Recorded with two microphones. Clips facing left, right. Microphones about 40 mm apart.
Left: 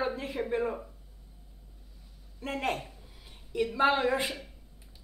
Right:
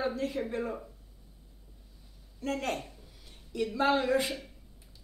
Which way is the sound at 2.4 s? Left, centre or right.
Centre.